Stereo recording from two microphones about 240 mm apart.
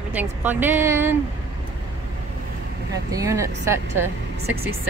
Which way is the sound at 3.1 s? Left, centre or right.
Centre.